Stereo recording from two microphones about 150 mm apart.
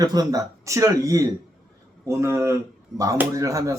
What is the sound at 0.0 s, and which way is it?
Speech, 25° right (ahead or behind).